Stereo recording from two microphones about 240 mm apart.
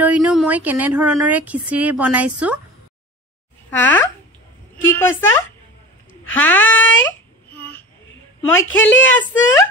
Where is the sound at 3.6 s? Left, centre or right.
Centre.